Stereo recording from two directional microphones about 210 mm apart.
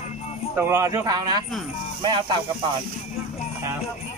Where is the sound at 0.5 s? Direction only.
10° right (ahead or behind).